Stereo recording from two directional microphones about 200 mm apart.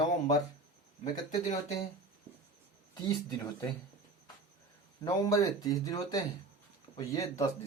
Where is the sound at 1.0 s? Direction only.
20° left (ahead or behind).